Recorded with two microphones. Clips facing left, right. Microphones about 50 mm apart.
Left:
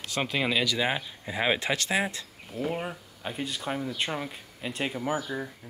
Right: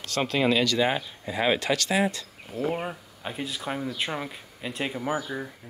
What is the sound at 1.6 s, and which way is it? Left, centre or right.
Speech, left.